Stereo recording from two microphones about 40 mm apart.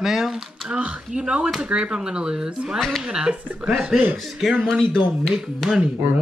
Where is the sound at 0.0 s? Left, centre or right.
Centre.